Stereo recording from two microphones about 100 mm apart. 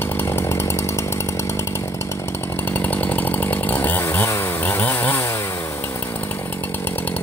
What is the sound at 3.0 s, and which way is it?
Chainsaw, 20° left (ahead or behind).